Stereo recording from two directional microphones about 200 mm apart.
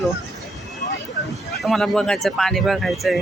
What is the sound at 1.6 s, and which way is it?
Speech, centre (ahead or behind).